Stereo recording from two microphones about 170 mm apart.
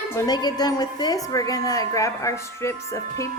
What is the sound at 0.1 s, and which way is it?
A woman's voice, 20° left (ahead or behind).